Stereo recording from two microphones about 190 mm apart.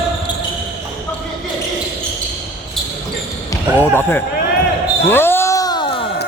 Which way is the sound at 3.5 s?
10° left (ahead or behind).